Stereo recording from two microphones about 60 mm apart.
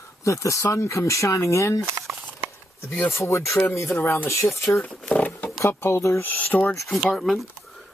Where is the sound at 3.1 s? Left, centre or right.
Left.